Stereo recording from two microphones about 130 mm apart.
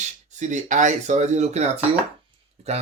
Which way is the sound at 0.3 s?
65° right (ahead or behind).